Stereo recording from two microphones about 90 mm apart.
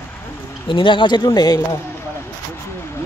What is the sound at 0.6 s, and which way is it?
Speech, 70° left (ahead or behind).